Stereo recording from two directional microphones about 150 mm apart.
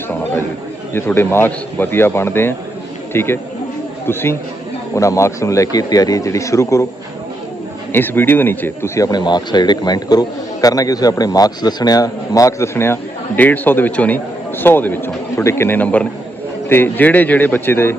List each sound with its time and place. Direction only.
0.9 s a man's voice: 15° left (ahead or behind)
7.9 s a man's voice: 15° left (ahead or behind)